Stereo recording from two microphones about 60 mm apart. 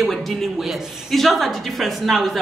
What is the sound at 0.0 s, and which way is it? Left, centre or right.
A woman's voice, centre.